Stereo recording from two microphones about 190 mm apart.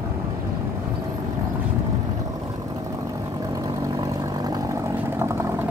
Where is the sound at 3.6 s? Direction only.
20° right (ahead or behind).